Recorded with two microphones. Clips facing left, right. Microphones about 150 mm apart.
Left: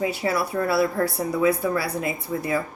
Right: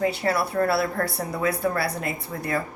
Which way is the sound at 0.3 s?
60° right (ahead or behind).